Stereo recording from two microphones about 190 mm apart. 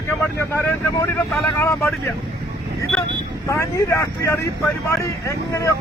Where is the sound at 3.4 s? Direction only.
15° left (ahead or behind).